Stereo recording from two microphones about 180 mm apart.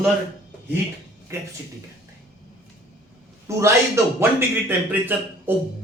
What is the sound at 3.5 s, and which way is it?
Speech, 15° right (ahead or behind).